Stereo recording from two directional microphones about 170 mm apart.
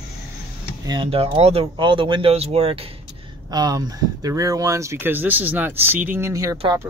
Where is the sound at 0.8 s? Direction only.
30° right (ahead or behind).